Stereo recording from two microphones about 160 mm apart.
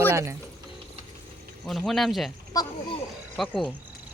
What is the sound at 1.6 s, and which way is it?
Speech, centre (ahead or behind).